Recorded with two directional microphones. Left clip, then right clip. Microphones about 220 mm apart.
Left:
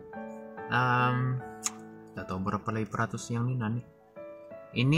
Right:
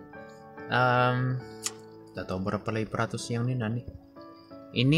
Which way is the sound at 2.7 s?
10° left (ahead or behind).